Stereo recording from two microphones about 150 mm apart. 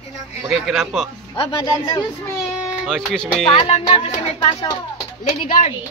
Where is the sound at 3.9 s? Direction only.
35° left (ahead or behind).